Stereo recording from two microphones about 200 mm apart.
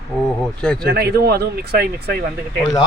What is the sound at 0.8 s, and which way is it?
Speech, 50° right (ahead or behind).